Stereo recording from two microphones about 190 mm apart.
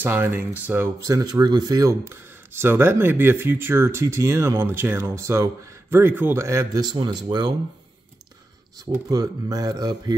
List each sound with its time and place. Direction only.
0.0 s speech: 10° right (ahead or behind)
9.1 s speech: 20° right (ahead or behind)